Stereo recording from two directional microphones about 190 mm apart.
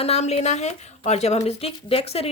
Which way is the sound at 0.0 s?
35° left (ahead or behind).